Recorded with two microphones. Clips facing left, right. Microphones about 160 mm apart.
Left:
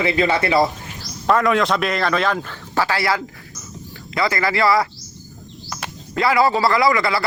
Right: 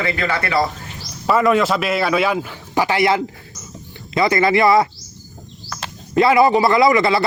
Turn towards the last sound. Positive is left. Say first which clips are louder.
# right 4 dB
turn(degrees=-25)  # may be behind; listen again after turning